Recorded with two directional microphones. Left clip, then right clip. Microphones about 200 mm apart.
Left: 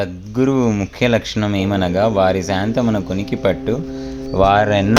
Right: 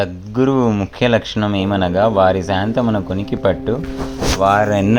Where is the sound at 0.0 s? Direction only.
10° left (ahead or behind).